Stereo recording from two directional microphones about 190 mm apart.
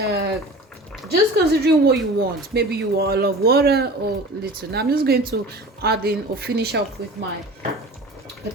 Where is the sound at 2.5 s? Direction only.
55° right (ahead or behind).